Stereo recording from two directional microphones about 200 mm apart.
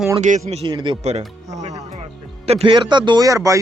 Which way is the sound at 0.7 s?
20° right (ahead or behind).